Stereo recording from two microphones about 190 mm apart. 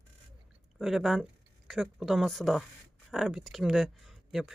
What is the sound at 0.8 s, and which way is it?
Speech, centre (ahead or behind).